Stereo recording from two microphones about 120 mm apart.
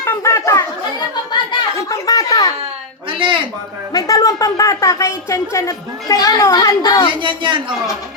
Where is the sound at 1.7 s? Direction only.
30° left (ahead or behind).